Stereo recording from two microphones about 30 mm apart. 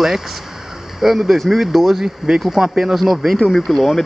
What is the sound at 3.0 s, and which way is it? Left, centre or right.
Speech, centre.